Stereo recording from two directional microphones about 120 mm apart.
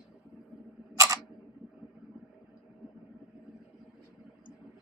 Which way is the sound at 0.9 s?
30° right (ahead or behind).